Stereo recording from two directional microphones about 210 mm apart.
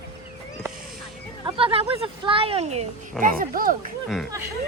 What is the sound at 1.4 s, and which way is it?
Speech, 25° right (ahead or behind).